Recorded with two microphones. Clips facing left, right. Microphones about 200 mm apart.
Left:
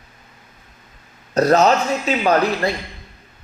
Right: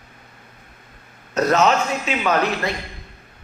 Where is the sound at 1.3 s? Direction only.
35° left (ahead or behind).